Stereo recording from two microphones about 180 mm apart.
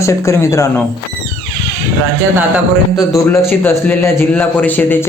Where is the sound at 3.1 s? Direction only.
10° left (ahead or behind).